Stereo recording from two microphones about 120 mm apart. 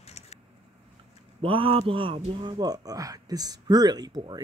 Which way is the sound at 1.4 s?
50° right (ahead or behind).